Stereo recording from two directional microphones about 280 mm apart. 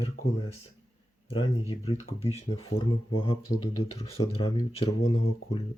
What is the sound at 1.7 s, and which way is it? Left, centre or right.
Speech, left.